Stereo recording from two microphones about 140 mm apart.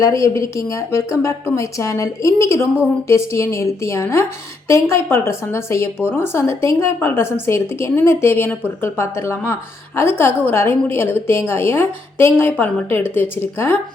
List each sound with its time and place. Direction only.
0.0 s a woman's voice: 20° left (ahead or behind)